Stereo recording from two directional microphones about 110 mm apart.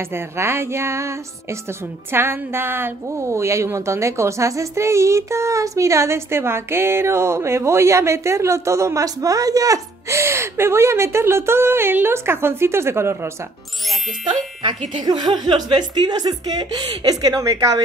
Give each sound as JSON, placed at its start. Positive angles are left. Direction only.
{"t": 0.1, "sound": "a woman's voice", "side_deg": -20}
{"t": 15.0, "sound": "speech", "side_deg": -40}